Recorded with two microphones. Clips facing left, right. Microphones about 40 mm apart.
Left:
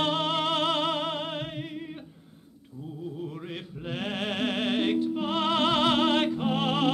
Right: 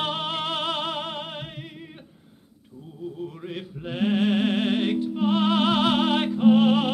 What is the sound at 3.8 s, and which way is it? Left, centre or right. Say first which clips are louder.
Music: right 8 dB; centre.